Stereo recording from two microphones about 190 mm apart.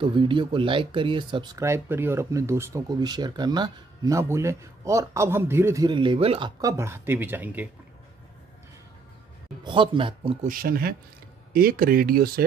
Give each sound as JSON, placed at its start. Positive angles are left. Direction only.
{"t": 0.0, "sound": "speech", "side_deg": -25}
{"t": 6.6, "sound": "speech", "side_deg": -15}
{"t": 9.6, "sound": "speech", "side_deg": -25}
{"t": 10.4, "sound": "speech", "side_deg": -50}